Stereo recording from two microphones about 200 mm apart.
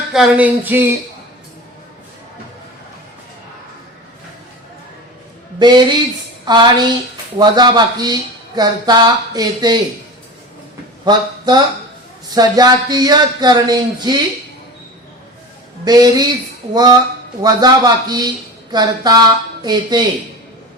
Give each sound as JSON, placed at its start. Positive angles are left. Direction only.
{"t": 0.1, "sound": "a sound", "side_deg": -5}
{"t": 5.5, "sound": "a man's voice", "side_deg": -20}
{"t": 11.0, "sound": "a man's voice", "side_deg": -20}
{"t": 15.8, "sound": "a man's voice", "side_deg": -20}